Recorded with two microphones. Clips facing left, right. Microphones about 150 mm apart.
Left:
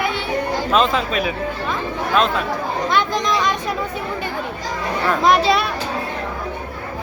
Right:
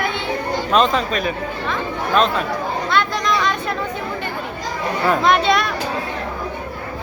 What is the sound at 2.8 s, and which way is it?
Chatter, 15° left (ahead or behind).